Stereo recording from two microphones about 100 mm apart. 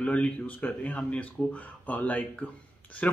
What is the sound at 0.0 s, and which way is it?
Speech, 15° left (ahead or behind).